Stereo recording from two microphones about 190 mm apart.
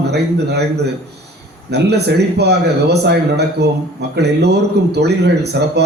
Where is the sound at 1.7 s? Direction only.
60° right (ahead or behind).